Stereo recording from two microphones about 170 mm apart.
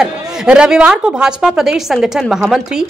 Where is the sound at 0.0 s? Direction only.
5° right (ahead or behind).